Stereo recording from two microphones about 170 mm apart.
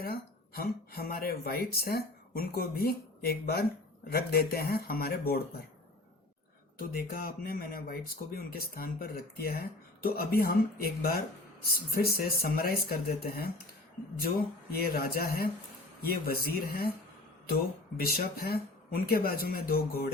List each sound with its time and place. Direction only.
0.0 s speech: 65° left (ahead or behind)
6.7 s speech: 55° left (ahead or behind)
14.7 s speech: 60° left (ahead or behind)
17.9 s speech: 60° left (ahead or behind)